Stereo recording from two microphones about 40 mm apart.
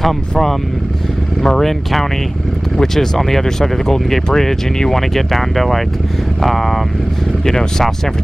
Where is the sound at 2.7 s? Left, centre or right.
Centre.